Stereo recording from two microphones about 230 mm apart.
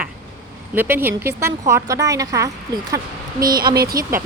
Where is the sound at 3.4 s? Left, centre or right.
Right.